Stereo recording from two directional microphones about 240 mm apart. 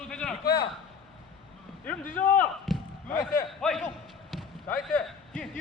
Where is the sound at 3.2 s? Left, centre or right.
Left.